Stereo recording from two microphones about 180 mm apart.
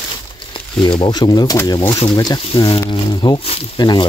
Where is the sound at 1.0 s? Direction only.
25° left (ahead or behind).